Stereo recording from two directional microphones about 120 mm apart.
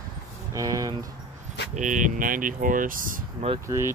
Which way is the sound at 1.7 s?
90° right.